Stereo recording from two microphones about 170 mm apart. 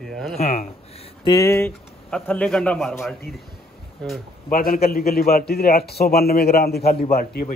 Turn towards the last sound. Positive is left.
turn(degrees=60)  # may be behind; listen again after turning